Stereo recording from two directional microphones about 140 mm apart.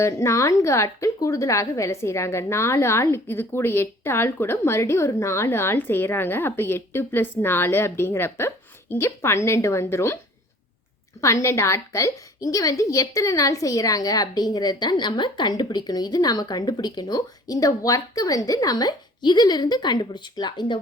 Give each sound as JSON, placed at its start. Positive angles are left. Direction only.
{"t": 0.0, "sound": "a woman's voice", "side_deg": 20}
{"t": 11.2, "sound": "a woman's voice", "side_deg": 20}